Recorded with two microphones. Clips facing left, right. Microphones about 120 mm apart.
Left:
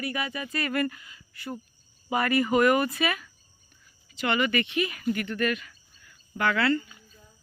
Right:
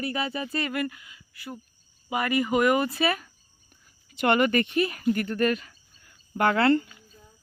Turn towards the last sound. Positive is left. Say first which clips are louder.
# right 4 dB
turn(degrees=-50)  # may be behind; listen again after turning